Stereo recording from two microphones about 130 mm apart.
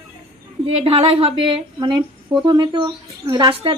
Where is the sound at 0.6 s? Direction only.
45° right (ahead or behind).